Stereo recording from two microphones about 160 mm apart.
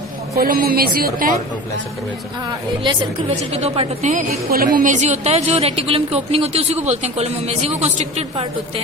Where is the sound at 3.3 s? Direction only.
40° right (ahead or behind).